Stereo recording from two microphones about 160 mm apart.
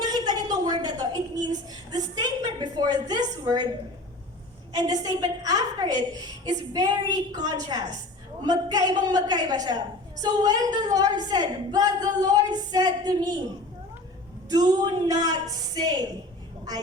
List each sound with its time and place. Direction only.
0.0 s a sound: 25° right (ahead or behind)
4.7 s a woman's voice: 25° right (ahead or behind)
14.5 s a woman's voice: 25° right (ahead or behind)